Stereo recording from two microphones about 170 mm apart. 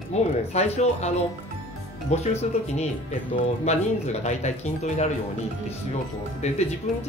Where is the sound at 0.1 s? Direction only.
40° left (ahead or behind).